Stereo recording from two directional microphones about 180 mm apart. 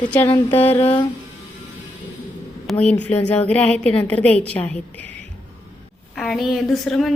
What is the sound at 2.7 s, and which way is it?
A woman's voice, 5° left (ahead or behind).